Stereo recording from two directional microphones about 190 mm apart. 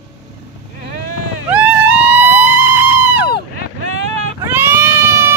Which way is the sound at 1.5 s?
5° right (ahead or behind).